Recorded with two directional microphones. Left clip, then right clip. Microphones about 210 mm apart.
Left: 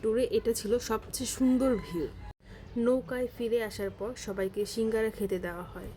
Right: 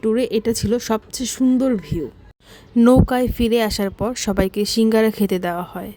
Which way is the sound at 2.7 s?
55° right (ahead or behind).